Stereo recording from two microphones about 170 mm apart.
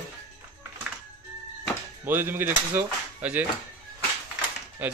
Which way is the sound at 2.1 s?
10° right (ahead or behind).